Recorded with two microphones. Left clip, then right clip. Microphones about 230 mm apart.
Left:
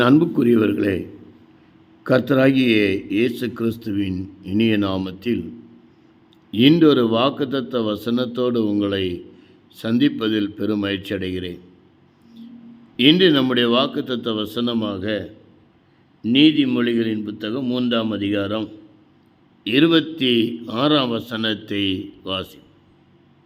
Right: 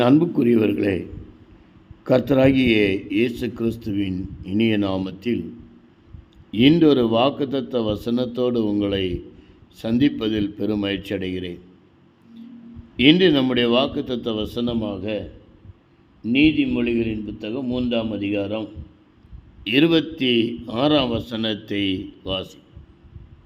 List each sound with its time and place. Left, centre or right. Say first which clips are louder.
0.0 s a man's voice: left 1 dB; centre
2.0 s a man's voice: even; centre
6.5 s a man's voice: left 1 dB; centre
13.0 s a man's voice: left 1 dB; centre
16.2 s a man's voice: left 3 dB; centre
19.6 s a man's voice: left 1 dB; centre